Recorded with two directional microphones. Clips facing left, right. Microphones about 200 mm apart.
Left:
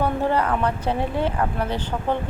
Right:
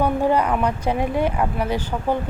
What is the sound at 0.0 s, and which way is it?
Speech, 15° right (ahead or behind).